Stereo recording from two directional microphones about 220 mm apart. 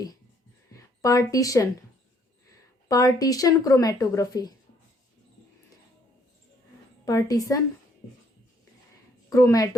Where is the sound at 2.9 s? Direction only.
15° left (ahead or behind).